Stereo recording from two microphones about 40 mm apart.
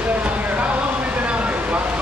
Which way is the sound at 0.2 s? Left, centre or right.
Right.